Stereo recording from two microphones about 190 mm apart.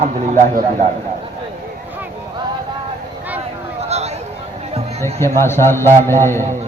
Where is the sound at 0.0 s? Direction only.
40° right (ahead or behind).